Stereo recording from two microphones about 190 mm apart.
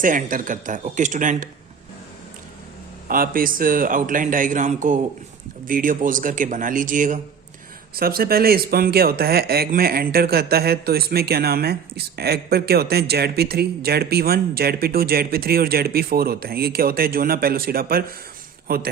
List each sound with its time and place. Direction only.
0.0 s speech: 45° right (ahead or behind)
3.1 s speech: 50° right (ahead or behind)